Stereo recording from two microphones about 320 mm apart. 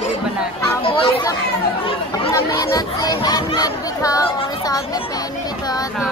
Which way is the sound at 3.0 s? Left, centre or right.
Centre.